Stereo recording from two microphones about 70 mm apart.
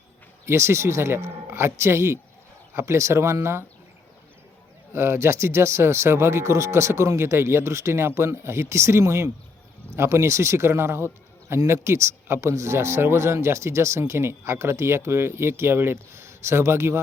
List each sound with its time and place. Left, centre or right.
0.4 s a man's voice: right
4.9 s a man's voice: right